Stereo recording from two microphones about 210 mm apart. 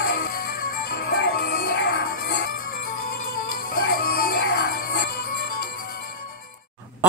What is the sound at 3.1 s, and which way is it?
Music, 45° left (ahead or behind).